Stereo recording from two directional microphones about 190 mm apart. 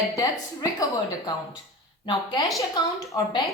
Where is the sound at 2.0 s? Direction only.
25° left (ahead or behind).